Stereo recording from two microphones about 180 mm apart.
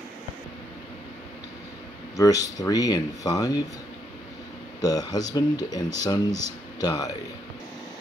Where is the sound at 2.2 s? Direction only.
20° left (ahead or behind).